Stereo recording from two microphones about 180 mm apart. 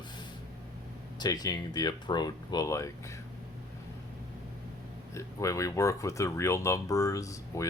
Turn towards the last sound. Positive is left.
turn(degrees=15)  # may be behind; listen again after turning